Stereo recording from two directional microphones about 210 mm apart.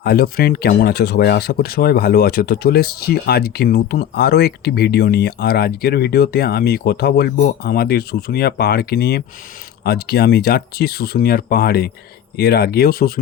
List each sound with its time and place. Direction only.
0.0 s speech: 50° left (ahead or behind)